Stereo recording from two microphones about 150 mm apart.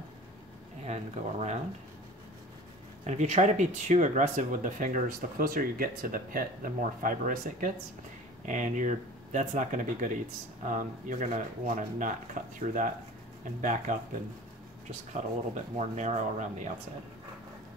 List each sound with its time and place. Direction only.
0.8 s speech: 50° right (ahead or behind)
3.1 s speech: 50° right (ahead or behind)
15.5 s speech: 50° right (ahead or behind)